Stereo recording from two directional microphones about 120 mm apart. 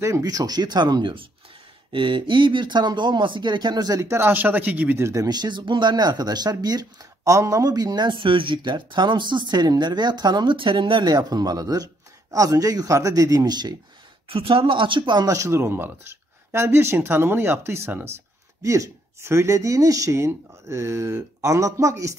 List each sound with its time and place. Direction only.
0.0 s speech: 30° right (ahead or behind)
14.3 s speech: 50° right (ahead or behind); by 22.1 s 25° right (ahead or behind)